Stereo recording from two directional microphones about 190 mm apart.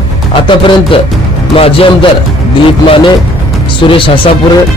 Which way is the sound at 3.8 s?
25° left (ahead or behind).